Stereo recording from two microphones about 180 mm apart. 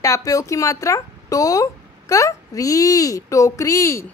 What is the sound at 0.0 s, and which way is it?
A child's voice, 20° left (ahead or behind).